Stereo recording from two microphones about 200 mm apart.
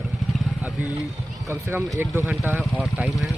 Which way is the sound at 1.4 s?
15° right (ahead or behind).